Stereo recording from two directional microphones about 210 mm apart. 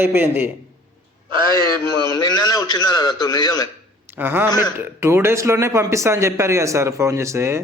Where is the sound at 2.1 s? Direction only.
20° left (ahead or behind).